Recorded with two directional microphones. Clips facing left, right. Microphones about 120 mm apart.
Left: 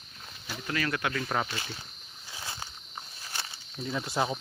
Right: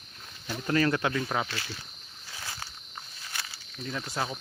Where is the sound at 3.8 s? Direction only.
15° left (ahead or behind).